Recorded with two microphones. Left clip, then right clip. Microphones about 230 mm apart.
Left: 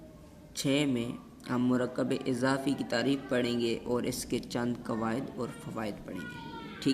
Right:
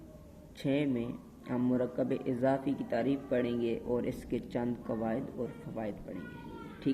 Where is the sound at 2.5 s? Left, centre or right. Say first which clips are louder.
Even; left.